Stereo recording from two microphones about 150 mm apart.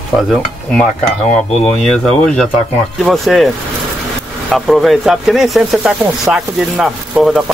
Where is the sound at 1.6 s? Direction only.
5° left (ahead or behind).